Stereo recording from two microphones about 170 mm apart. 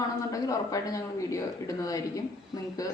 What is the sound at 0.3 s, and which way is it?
Speech, 20° left (ahead or behind).